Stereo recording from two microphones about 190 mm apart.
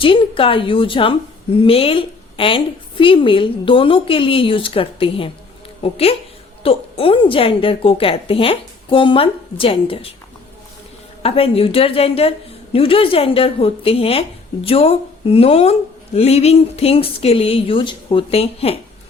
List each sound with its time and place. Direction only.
0.0 s a woman's voice: 25° left (ahead or behind)
11.2 s a woman's voice: 30° left (ahead or behind)